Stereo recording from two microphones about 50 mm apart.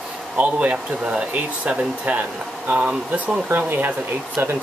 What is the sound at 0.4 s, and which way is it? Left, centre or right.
Speech, right.